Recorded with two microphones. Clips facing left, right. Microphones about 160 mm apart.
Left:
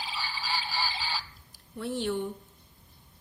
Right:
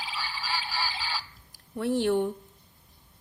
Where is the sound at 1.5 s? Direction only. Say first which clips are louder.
Right 6 dB; 80° right; by 2.3 s 65° right (ahead or behind).